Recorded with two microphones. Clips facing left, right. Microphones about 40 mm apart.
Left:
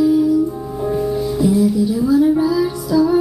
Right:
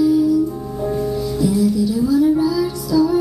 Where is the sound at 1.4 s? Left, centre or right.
Centre.